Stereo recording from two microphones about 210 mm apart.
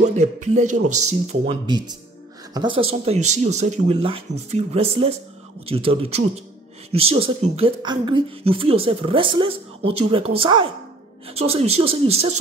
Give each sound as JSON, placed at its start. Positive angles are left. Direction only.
{"t": 0.0, "sound": "speech", "side_deg": -35}
{"t": 1.5, "sound": "speech", "side_deg": -20}